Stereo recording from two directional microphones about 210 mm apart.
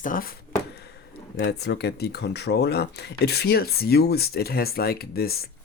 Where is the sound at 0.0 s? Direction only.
40° left (ahead or behind).